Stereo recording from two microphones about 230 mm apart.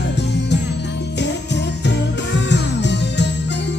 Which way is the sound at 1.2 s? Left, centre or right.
Left.